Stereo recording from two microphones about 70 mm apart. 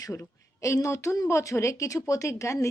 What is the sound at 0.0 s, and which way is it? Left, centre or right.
A woman's voice, left.